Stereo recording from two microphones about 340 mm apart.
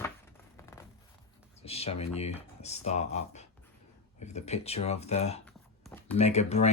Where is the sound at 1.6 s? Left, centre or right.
Centre.